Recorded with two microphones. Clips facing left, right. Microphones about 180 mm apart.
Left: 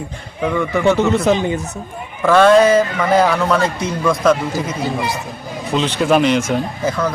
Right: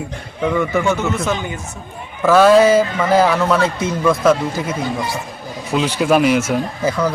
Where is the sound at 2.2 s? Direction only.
5° right (ahead or behind).